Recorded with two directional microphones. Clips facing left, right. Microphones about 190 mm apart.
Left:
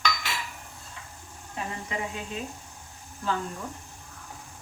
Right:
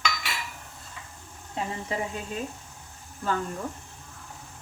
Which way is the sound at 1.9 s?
35° right (ahead or behind).